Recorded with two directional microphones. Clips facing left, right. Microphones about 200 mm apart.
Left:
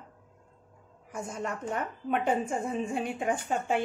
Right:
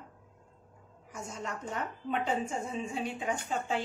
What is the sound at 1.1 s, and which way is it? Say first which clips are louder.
Speech: left 5 dB; 55° left (ahead or behind).